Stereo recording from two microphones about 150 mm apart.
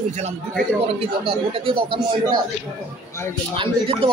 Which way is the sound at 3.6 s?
35° right (ahead or behind).